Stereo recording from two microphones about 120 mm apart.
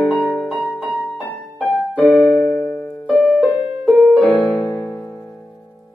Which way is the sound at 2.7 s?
10° left (ahead or behind).